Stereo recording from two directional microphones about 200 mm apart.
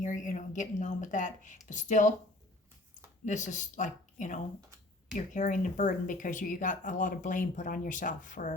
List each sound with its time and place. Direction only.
0.0 s speech: 40° left (ahead or behind)
3.2 s speech: 40° left (ahead or behind)